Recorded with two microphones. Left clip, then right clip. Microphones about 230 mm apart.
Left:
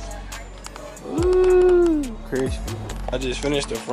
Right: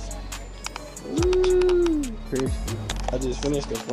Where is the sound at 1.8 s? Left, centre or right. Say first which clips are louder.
Left 4 dB; centre.